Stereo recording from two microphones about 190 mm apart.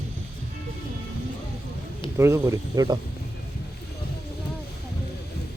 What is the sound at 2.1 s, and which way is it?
Speech, 15° right (ahead or behind).